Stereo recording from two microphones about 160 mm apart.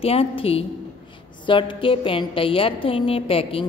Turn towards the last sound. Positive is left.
turn(degrees=35)  # may be behind; listen again after turning